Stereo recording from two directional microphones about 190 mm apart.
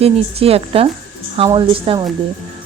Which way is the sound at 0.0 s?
30° right (ahead or behind).